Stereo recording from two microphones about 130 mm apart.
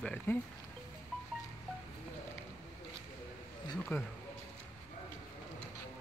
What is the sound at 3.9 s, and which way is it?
Speech, 20° left (ahead or behind).